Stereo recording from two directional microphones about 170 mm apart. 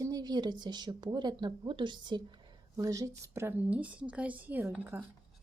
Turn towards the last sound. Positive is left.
turn(degrees=-15)  # may be behind; listen again after turning